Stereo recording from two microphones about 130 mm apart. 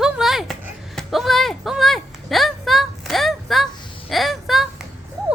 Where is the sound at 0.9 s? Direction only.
Centre (ahead or behind).